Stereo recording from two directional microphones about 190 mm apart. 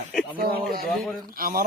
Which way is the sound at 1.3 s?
50° right (ahead or behind).